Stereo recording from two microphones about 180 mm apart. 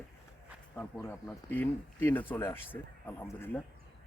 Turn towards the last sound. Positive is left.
turn(degrees=10)  # may be behind; listen again after turning